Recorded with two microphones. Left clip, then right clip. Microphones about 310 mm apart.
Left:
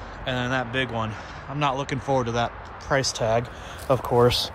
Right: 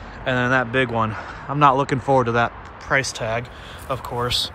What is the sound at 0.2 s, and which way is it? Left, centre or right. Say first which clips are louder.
Speech: right 7 dB; centre.